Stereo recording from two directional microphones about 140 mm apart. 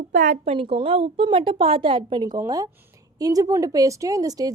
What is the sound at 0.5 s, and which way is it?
A woman's voice, 40° right (ahead or behind).